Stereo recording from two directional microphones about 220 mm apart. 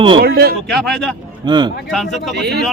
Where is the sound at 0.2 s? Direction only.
45° right (ahead or behind).